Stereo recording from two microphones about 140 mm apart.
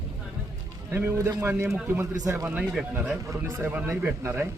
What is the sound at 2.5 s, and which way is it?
Speech, 5° right (ahead or behind).